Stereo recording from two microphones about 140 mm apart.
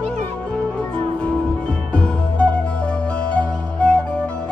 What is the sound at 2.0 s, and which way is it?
Music, 10° left (ahead or behind).